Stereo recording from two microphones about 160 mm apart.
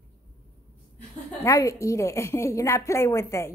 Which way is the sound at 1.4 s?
20° left (ahead or behind).